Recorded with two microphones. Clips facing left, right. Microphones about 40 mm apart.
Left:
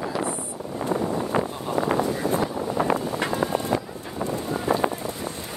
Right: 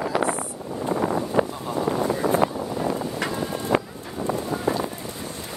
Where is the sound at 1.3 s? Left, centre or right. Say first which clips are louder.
Right 1 dB; left.